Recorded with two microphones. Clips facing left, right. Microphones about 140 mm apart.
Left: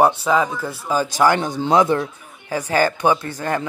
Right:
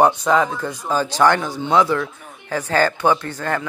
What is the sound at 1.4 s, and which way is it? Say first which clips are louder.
Speech: left 1 dB; 30° left (ahead or behind).